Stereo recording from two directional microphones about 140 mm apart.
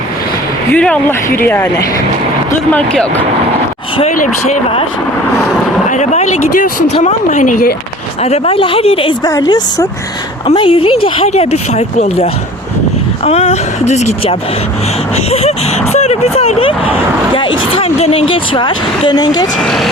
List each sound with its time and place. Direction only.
0.7 s speech: 10° left (ahead or behind)
2.7 s speech: 5° left (ahead or behind)
4.1 s speech: 65° left (ahead or behind)
5.9 s speech: 60° left (ahead or behind)
8.2 s speech: 45° left (ahead or behind)
9.2 s a woman's voice: 25° left (ahead or behind)
10.4 s speech: 40° left (ahead or behind)
19.6 s speech: centre (ahead or behind)